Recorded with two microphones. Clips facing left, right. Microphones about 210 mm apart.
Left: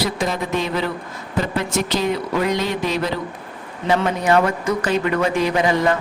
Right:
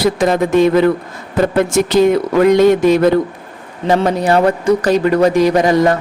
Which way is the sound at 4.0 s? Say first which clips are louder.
Right 4 dB; 35° right (ahead or behind).